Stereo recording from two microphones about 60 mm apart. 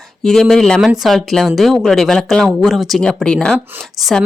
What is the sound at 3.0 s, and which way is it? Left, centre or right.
Speech, centre.